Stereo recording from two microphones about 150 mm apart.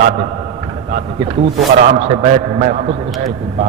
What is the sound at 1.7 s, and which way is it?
A man's voice, 55° right (ahead or behind).